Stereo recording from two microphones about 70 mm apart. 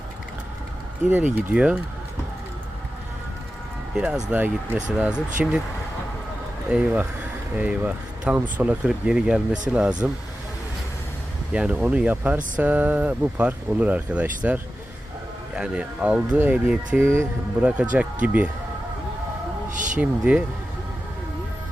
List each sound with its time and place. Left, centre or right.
1.1 s speech: right
3.9 s speech: centre
4.3 s speech: right
4.9 s speech: centre
6.7 s speech: centre
8.9 s speech: centre
11.5 s speech: centre
17.0 s speech: right
17.6 s speech: centre
20.0 s speech: centre